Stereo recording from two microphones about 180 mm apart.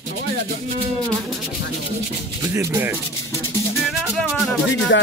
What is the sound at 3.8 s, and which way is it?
Music, centre (ahead or behind).